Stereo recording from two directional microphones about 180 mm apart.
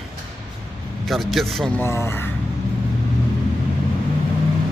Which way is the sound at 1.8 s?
15° left (ahead or behind).